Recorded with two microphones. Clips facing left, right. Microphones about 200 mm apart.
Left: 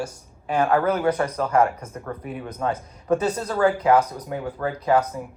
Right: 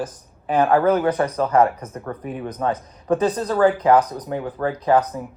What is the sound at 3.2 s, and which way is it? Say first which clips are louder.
Speech: right 6 dB; 35° right (ahead or behind).